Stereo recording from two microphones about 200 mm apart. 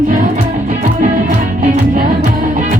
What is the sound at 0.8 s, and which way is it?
Music, 40° right (ahead or behind).